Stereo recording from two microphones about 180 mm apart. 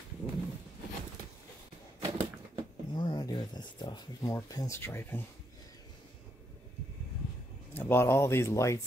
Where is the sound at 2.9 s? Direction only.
20° left (ahead or behind).